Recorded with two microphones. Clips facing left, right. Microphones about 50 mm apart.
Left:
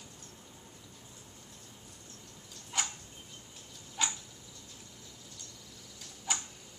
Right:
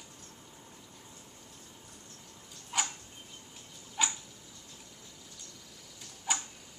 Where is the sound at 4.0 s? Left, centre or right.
Centre.